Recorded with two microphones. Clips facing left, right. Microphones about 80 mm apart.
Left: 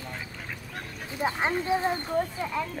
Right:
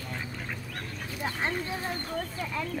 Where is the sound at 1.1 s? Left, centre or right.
Left.